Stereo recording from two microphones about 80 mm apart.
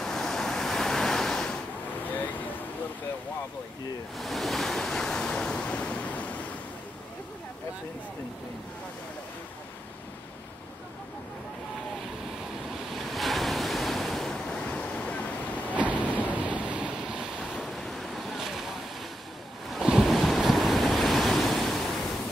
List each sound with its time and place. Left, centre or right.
0.0 s waves: centre
2.0 s vehicle: left
4.2 s waves: centre
12.9 s waves: centre
15.8 s waves: centre
17.6 s vehicle: centre
19.7 s waves: centre